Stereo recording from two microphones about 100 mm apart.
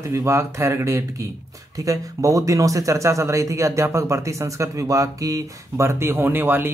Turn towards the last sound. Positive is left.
turn(degrees=-20)  # may be behind; listen again after turning